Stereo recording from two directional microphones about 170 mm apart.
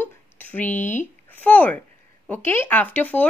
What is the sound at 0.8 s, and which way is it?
Speech, 45° left (ahead or behind).